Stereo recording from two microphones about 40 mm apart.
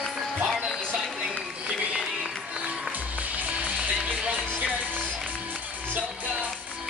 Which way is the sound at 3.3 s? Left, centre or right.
Right.